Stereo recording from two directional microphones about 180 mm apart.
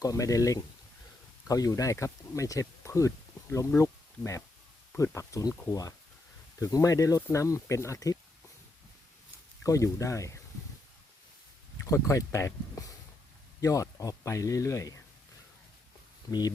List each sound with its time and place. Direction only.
0.0 s speech: 20° left (ahead or behind)
9.6 s speech: 15° left (ahead or behind)
11.9 s speech: 15° left (ahead or behind)